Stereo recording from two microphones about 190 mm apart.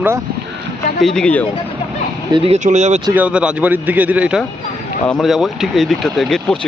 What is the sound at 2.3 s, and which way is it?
Speech, 35° right (ahead or behind).